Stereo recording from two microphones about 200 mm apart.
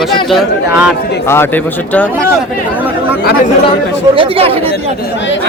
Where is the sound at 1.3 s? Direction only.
10° left (ahead or behind).